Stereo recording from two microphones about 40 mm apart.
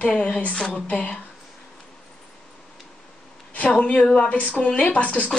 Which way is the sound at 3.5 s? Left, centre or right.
Left.